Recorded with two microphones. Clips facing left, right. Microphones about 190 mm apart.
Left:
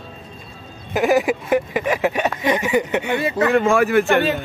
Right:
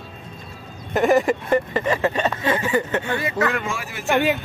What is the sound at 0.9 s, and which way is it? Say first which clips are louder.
Speech: even; 5° left (ahead or behind).